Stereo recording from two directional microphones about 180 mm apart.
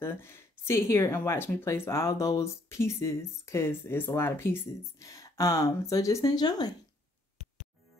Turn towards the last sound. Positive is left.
turn(degrees=20)  # may be behind; listen again after turning